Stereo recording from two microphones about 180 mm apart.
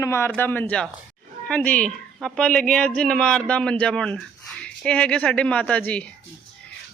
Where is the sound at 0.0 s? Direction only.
15° left (ahead or behind).